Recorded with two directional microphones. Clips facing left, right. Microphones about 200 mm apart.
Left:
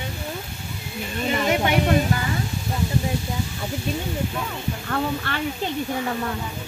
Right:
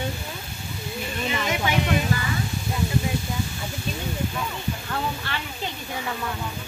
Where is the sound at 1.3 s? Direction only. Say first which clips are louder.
Left 5 dB; 40° left (ahead or behind).